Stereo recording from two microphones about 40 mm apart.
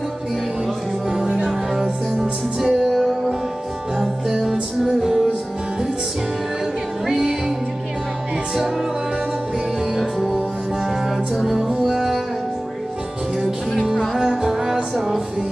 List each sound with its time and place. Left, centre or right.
1.1 s music: right; by 3.3 s centre
4.4 s music: centre
7.1 s music: centre
9.9 s music: centre
14.1 s music: centre